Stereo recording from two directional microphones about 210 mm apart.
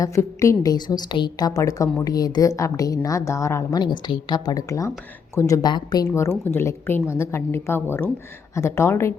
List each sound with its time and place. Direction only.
0.0 s a woman's voice: 15° left (ahead or behind)